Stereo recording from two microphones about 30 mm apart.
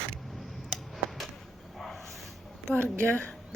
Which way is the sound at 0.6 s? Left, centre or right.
Centre.